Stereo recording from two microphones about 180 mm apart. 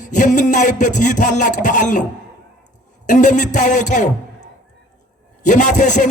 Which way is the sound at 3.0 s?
45° left (ahead or behind).